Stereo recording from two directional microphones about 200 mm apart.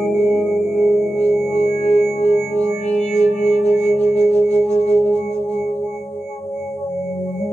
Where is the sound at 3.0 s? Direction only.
35° left (ahead or behind).